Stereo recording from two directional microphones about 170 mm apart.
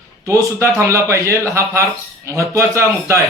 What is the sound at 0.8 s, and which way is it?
A man's voice, 15° right (ahead or behind).